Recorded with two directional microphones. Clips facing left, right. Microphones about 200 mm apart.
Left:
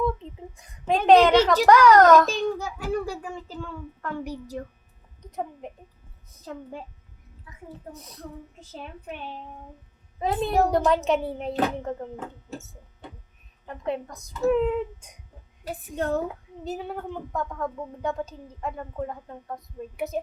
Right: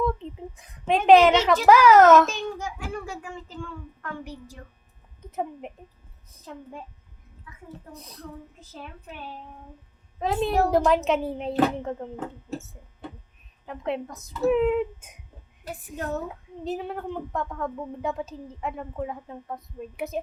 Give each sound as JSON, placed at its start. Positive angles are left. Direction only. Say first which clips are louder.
{"t": 0.5, "sound": "a woman's voice", "louder": "even", "side_deg": 0}
{"t": 2.2, "sound": "a child's voice", "louder": "left 3 dB", "side_deg": 35}
{"t": 5.2, "sound": "a woman's voice", "louder": "right 2 dB", "side_deg": -5}
{"t": 6.4, "sound": "a child's voice", "louder": "left 3 dB", "side_deg": 35}
{"t": 7.5, "sound": "a sound", "louder": "right 1 dB", "side_deg": 40}
{"t": 7.9, "sound": "a woman's voice", "louder": "right 1 dB", "side_deg": 0}
{"t": 10.2, "sound": "a woman's voice", "louder": "even", "side_deg": 0}
{"t": 16.6, "sound": "a woman's voice", "louder": "right 2 dB", "side_deg": 0}